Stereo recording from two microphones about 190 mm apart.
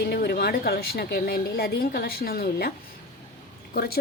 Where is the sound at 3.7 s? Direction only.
55° left (ahead or behind).